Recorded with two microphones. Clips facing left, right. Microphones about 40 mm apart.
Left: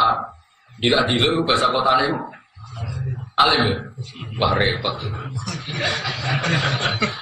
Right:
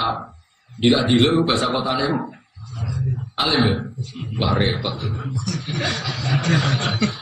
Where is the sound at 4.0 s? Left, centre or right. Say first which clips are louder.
Left 3 dB; centre.